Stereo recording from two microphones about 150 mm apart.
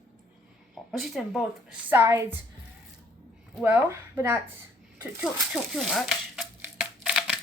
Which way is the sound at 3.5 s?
10° right (ahead or behind).